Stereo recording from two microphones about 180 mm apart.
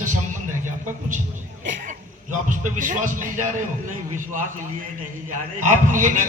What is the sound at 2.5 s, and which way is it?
Speech, 45° right (ahead or behind).